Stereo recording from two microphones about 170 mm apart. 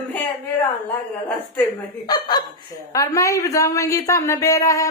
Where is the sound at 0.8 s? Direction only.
10° left (ahead or behind).